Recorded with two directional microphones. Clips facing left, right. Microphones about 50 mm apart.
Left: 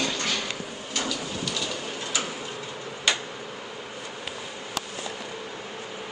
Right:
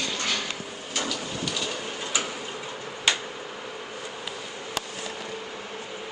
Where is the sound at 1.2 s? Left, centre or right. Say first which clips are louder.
Even; centre.